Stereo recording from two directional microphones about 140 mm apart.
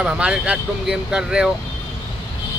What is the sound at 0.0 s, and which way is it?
Speech, 5° right (ahead or behind).